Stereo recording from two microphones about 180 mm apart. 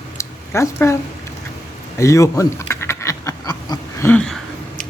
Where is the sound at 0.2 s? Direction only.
15° left (ahead or behind).